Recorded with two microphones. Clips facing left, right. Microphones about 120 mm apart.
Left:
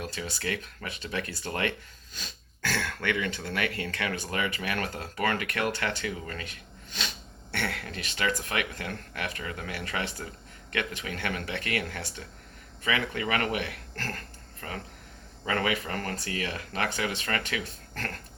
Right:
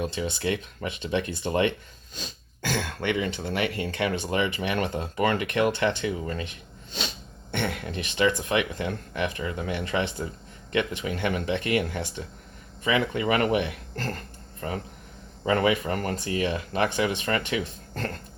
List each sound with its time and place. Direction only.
0.0 s speech: 25° right (ahead or behind)
7.5 s speech: 20° right (ahead or behind)